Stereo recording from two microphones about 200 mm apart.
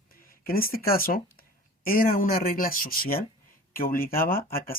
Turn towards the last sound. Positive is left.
turn(degrees=45)  # may be behind; listen again after turning